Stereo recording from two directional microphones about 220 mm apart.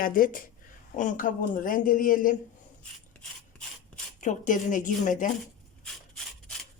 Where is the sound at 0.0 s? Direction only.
40° left (ahead or behind).